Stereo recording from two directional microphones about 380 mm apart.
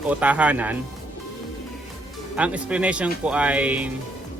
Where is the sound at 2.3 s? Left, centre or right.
Centre.